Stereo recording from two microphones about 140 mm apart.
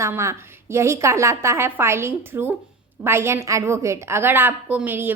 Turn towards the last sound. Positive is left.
turn(degrees=-15)  # may be behind; listen again after turning